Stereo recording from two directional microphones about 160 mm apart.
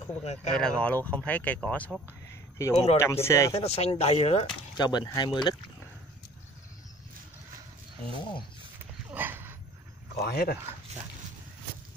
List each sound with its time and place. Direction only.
0.2 s speech: 45° left (ahead or behind)
0.5 s speech: 5° left (ahead or behind)
3.0 s speech: 15° left (ahead or behind)
3.5 s speech: 40° left (ahead or behind)
4.7 s speech: 25° left (ahead or behind)
8.2 s speech: 30° left (ahead or behind)
8.7 s dog: 15° right (ahead or behind)
10.1 s speech: 80° left